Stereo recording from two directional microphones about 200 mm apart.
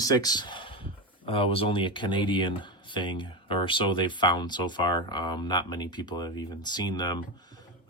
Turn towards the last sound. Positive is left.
turn(degrees=20)  # may be behind; listen again after turning